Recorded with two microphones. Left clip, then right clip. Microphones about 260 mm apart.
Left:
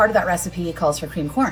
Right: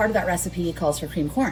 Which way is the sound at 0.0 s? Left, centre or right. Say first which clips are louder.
Left 5 dB; centre.